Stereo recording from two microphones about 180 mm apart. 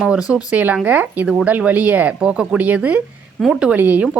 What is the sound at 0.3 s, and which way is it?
Speech, 20° left (ahead or behind).